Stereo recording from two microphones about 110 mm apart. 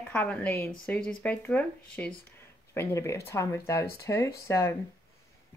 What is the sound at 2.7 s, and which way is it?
Speech, 25° left (ahead or behind).